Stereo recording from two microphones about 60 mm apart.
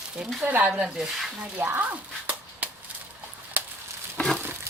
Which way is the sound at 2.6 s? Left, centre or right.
Right.